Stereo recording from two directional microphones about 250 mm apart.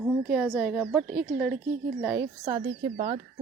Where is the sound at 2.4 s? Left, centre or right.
Right.